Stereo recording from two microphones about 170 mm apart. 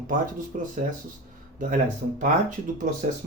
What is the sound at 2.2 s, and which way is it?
Speech, 50° right (ahead or behind).